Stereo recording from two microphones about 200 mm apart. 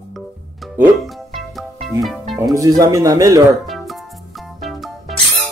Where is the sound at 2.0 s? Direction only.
Centre (ahead or behind).